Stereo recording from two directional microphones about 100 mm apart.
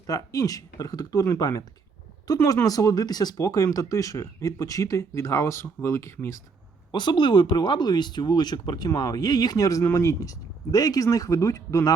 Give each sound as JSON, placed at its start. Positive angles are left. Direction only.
{"t": 0.1, "sound": "speech", "side_deg": 35}
{"t": 6.9, "sound": "speech", "side_deg": 50}